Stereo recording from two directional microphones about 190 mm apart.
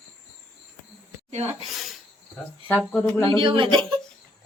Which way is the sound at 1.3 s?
35° right (ahead or behind).